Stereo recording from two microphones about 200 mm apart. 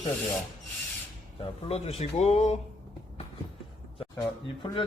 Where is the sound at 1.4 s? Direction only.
30° left (ahead or behind).